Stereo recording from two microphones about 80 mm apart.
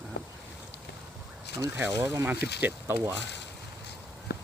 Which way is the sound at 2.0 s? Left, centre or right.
Right.